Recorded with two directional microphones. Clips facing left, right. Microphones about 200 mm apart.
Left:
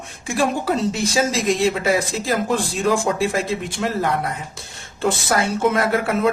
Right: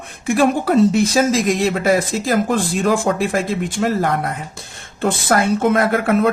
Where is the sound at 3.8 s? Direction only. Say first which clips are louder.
Right 3 dB; 45° right (ahead or behind).